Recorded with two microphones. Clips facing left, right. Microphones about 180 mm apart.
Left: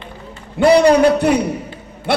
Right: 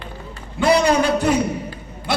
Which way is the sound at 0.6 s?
60° left (ahead or behind).